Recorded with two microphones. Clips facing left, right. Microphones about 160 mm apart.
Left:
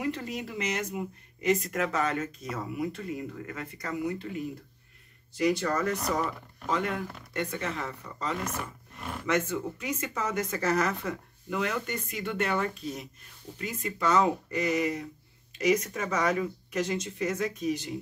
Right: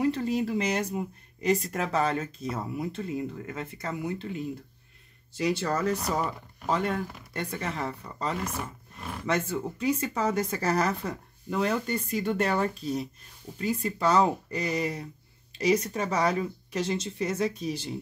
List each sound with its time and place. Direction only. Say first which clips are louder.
0.0 s speech: right 7 dB; 30° right (ahead or behind)
5.3 s speech: left 1 dB; 30° right (ahead or behind)